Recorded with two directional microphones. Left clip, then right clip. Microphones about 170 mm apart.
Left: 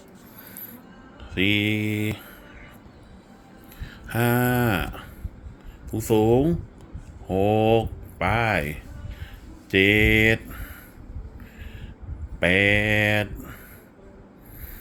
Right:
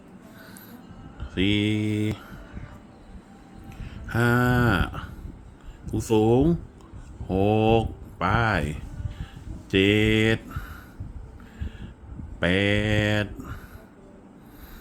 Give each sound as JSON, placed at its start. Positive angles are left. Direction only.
{"t": 1.3, "sound": "mantra", "side_deg": -15}
{"t": 4.0, "sound": "a sound", "side_deg": -10}
{"t": 5.8, "sound": "speech", "side_deg": -20}
{"t": 9.7, "sound": "mantra", "side_deg": -15}
{"t": 12.4, "sound": "speech", "side_deg": -15}